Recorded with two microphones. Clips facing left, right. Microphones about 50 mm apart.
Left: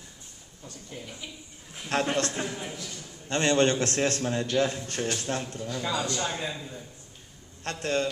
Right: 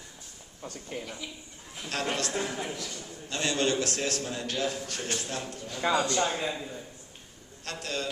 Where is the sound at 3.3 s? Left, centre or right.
Left.